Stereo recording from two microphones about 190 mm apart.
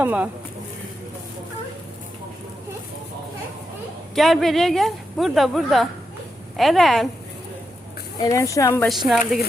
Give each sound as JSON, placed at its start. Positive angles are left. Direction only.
{"t": 0.0, "sound": "speech", "side_deg": -10}
{"t": 4.1, "sound": "speech", "side_deg": 0}
{"t": 8.2, "sound": "a woman's voice", "side_deg": 15}
{"t": 9.0, "sound": "speech", "side_deg": 0}